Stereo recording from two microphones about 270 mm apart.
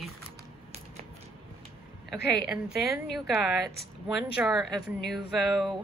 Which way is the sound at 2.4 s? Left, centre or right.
Centre.